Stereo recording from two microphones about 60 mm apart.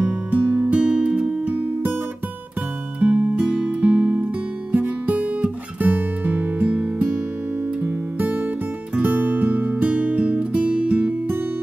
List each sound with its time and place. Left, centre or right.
0.0 s music: right
3.0 s music: right